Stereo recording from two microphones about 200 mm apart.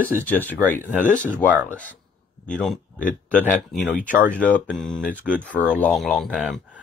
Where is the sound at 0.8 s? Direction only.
40° left (ahead or behind).